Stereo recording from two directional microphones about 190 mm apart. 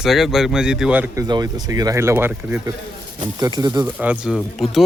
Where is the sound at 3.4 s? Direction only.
20° right (ahead or behind).